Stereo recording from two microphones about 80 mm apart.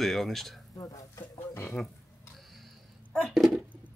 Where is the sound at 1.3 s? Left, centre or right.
Left.